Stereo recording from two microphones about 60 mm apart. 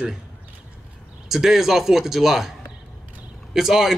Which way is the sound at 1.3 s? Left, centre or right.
Centre.